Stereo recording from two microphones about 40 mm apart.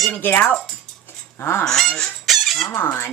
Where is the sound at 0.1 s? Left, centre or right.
Left.